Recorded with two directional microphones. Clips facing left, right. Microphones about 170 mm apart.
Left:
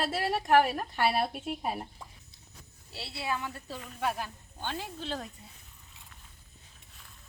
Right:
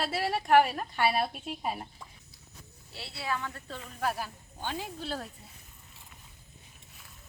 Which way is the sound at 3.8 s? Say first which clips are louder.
Even; 5° right (ahead or behind).